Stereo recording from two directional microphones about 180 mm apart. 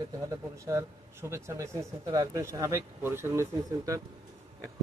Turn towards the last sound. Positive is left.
turn(degrees=-15)  # may be behind; listen again after turning